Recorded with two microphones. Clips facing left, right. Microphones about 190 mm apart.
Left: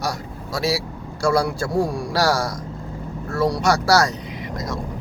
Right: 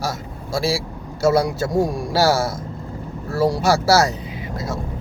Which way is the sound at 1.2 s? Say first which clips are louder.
Right 3 dB; 25° right (ahead or behind).